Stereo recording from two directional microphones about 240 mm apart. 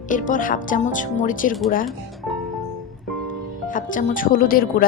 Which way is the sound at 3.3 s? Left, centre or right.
Left.